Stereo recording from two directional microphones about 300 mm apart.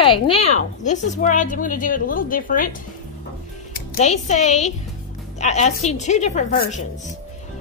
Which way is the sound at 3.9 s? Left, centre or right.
Left.